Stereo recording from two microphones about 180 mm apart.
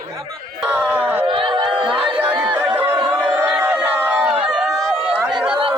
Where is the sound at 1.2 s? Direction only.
25° right (ahead or behind).